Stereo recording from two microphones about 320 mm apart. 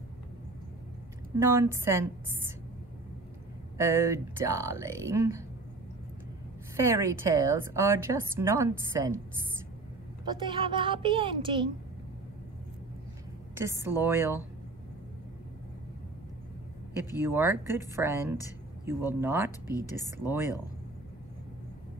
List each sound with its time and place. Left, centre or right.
1.4 s a woman's voice: centre
3.7 s a woman's voice: centre
6.9 s a woman's voice: centre
10.2 s a woman's voice: centre
13.6 s a woman's voice: centre
16.9 s a woman's voice: centre